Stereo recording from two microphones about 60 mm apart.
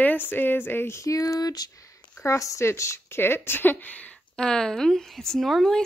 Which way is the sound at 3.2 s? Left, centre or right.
Left.